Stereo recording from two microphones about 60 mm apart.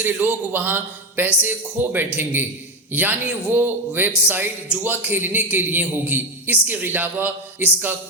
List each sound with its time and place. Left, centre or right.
0.0 s a man's voice: right